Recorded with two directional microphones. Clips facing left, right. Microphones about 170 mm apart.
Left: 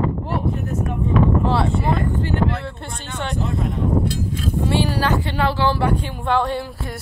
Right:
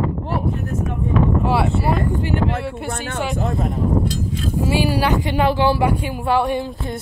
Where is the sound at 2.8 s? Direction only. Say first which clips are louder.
Right 6 dB; 55° right (ahead or behind).